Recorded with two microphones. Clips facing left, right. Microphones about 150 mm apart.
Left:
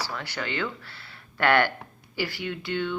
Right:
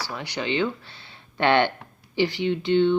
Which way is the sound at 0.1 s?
20° right (ahead or behind).